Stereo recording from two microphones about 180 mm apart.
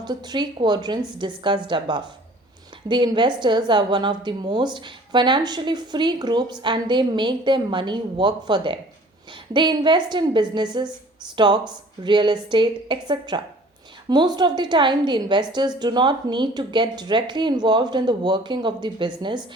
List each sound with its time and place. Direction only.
0.0 s a woman's voice: 25° right (ahead or behind)